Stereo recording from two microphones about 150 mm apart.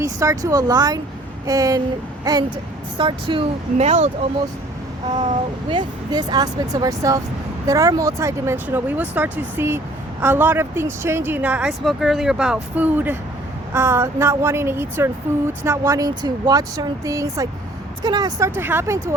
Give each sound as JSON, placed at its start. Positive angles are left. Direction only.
{"t": 0.0, "sound": "speech", "side_deg": -20}
{"t": 3.8, "sound": "speech", "side_deg": -50}
{"t": 5.1, "sound": "speech", "side_deg": -35}